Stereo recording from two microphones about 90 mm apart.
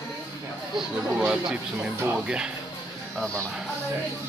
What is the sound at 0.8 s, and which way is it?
Speech, 10° right (ahead or behind).